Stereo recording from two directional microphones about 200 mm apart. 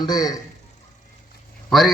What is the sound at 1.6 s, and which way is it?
Speech, centre (ahead or behind).